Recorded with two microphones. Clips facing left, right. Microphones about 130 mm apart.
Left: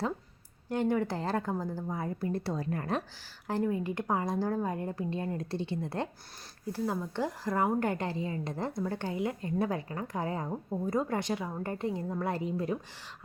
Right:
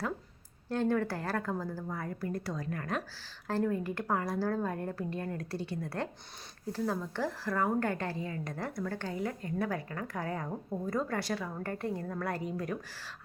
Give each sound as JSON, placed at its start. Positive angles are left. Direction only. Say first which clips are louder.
{"t": 0.7, "sound": "a woman's voice", "louder": "left 1 dB", "side_deg": 15}
{"t": 3.4, "sound": "a woman's voice", "louder": "left 1 dB", "side_deg": 15}